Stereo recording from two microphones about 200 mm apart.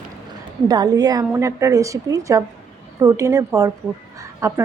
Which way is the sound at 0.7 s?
20° right (ahead or behind).